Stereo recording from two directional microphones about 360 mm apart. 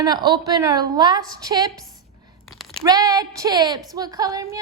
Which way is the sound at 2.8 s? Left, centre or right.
Centre.